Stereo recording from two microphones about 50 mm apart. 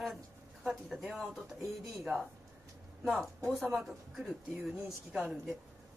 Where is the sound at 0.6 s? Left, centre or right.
Centre.